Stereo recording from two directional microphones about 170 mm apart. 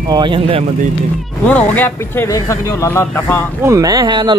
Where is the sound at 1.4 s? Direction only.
10° left (ahead or behind).